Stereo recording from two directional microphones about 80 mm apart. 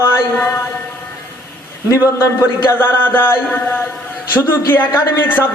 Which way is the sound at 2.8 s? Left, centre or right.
Left.